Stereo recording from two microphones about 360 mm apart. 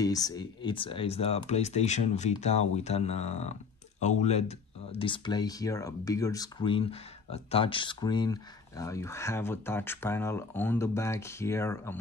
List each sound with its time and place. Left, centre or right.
0.0 s speech: centre